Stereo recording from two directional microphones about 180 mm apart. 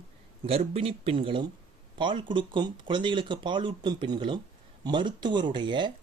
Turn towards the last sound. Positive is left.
turn(degrees=-25)  # may be behind; listen again after turning